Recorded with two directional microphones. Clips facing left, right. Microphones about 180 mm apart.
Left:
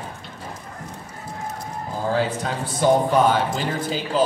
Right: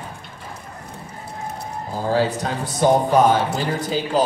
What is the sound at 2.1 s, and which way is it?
Speech, 40° right (ahead or behind).